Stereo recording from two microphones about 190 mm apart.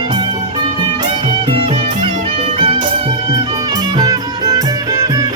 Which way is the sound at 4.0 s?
20° right (ahead or behind).